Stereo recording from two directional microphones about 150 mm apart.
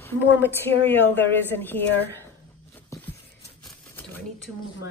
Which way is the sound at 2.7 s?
15° left (ahead or behind).